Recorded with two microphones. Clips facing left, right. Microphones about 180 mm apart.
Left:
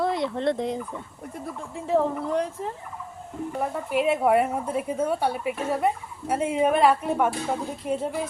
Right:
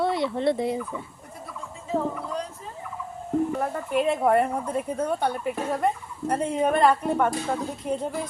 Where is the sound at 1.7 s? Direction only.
65° left (ahead or behind).